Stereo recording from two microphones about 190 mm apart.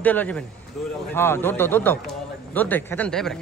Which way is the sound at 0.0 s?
10° left (ahead or behind).